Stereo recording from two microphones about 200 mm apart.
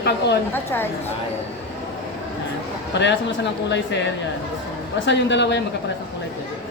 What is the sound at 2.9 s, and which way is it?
Speech, 60° left (ahead or behind).